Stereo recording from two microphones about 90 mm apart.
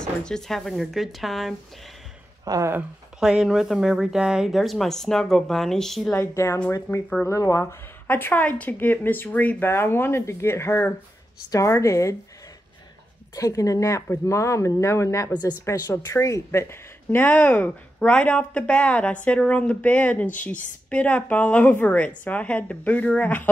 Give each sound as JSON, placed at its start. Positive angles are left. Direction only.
{"t": 0.0, "sound": "speech", "side_deg": 10}
{"t": 2.4, "sound": "speech", "side_deg": -40}
{"t": 3.2, "sound": "speech", "side_deg": -5}
{"t": 6.1, "sound": "speech", "side_deg": 30}
{"t": 8.1, "sound": "speech", "side_deg": 25}
{"t": 13.4, "sound": "speech", "side_deg": 40}